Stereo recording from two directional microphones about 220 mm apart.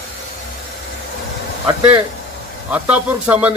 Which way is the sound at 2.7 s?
5° right (ahead or behind).